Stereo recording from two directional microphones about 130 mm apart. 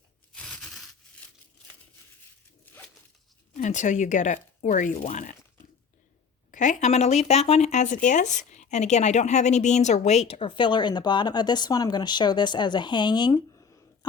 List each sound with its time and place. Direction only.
0.3 s a sound: 5° left (ahead or behind)
3.6 s speech: 70° left (ahead or behind)
4.6 s speech: 80° left
5.0 s speech: 65° left (ahead or behind)
6.5 s speech: 70° left (ahead or behind); by 13.4 s 35° left (ahead or behind)
13.6 s a sound: 25° left (ahead or behind)